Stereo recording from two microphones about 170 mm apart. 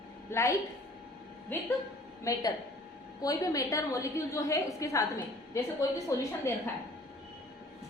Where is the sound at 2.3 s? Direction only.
20° left (ahead or behind).